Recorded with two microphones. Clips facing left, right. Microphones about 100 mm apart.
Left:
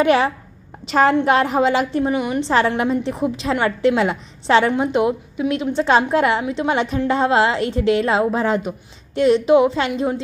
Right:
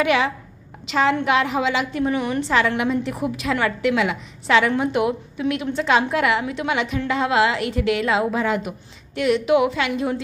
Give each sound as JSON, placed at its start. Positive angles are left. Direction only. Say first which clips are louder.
{"t": 0.0, "sound": "a woman's voice", "louder": "left 4 dB", "side_deg": 35}
{"t": 2.1, "sound": "a woman's voice", "louder": "left 2 dB", "side_deg": 15}
{"t": 2.4, "sound": "a woman's voice", "louder": "left 3 dB", "side_deg": 35}